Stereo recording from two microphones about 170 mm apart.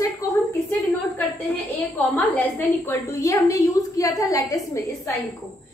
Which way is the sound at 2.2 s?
10° left (ahead or behind).